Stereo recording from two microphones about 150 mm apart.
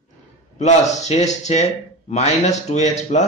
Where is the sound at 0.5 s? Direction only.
50° left (ahead or behind).